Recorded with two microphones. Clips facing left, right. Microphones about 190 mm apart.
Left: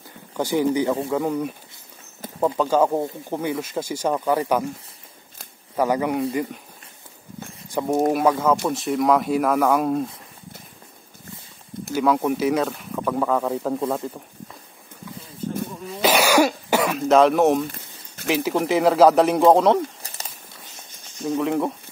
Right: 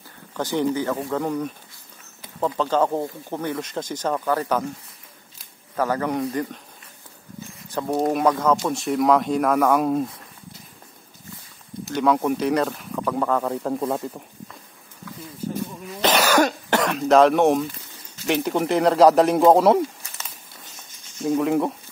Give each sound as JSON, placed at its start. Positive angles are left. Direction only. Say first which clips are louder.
{"t": 0.4, "sound": "speech", "louder": "left 2 dB", "side_deg": 10}
{"t": 5.8, "sound": "speech", "louder": "left 2 dB", "side_deg": 10}
{"t": 7.7, "sound": "a sound", "louder": "left 2 dB", "side_deg": 10}
{"t": 8.1, "sound": "speech", "louder": "right 2 dB", "side_deg": 5}
{"t": 11.9, "sound": "speech", "louder": "even", "side_deg": 0}
{"t": 16.0, "sound": "cough", "louder": "left 1 dB", "side_deg": 10}
{"t": 17.1, "sound": "speech", "louder": "even", "side_deg": 0}
{"t": 20.0, "sound": "a sound", "louder": "left 2 dB", "side_deg": 35}
{"t": 21.2, "sound": "speech", "louder": "right 2 dB", "side_deg": 0}